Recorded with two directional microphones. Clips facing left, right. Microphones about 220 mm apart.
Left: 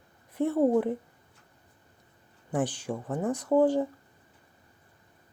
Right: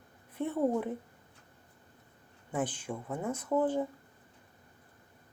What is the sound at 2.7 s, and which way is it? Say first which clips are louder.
Speech: left 5 dB; 75° left (ahead or behind).